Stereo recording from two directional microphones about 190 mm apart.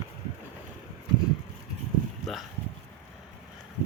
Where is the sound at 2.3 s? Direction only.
Centre (ahead or behind).